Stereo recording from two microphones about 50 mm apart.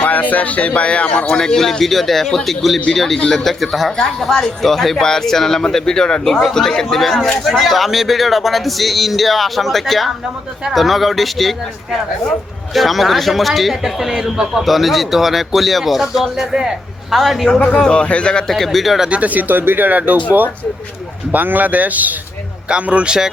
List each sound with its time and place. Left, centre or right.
0.0 s speech: left
1.4 s speech: centre
6.9 s a man's voice: centre
17.7 s speech: centre
18.4 s speech: centre
19.0 s speech: right
21.3 s speech: right
22.7 s speech: right